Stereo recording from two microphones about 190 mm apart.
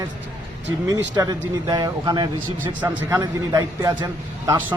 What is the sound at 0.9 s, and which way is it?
A man's voice, 20° right (ahead or behind).